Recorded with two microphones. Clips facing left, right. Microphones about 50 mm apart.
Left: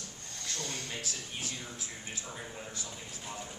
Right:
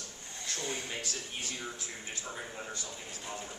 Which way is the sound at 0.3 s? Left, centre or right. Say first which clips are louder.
Right 2 dB; centre.